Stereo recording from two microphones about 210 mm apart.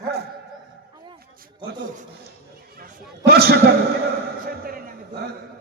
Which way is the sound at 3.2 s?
50° right (ahead or behind).